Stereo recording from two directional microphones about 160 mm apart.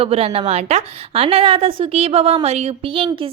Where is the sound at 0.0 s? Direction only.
40° right (ahead or behind).